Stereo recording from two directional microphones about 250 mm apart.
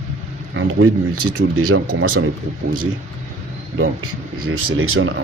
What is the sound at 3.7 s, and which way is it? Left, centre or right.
A man's voice, right.